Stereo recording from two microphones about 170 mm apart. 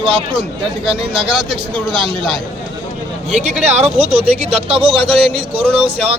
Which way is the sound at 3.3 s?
40° right (ahead or behind).